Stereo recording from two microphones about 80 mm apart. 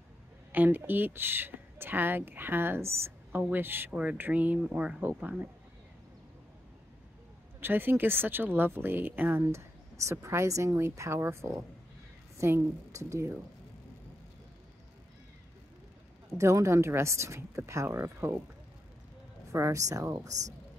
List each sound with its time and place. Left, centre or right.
0.5 s speech: right
3.9 s speech: centre
7.6 s speech: right
10.2 s speech: right
16.3 s speech: right
19.5 s speech: right